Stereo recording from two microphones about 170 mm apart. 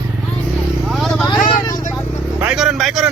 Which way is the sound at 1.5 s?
25° left (ahead or behind).